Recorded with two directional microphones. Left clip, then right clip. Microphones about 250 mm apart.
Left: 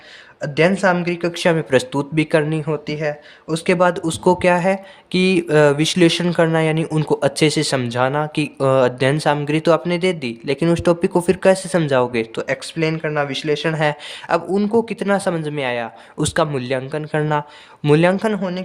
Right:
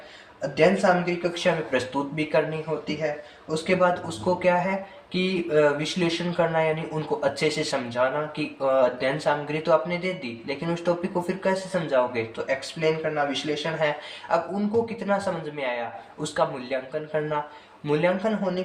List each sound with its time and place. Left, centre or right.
0.5 s speech: left